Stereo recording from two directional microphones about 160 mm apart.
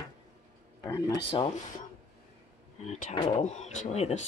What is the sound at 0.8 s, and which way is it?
Speech, 20° left (ahead or behind).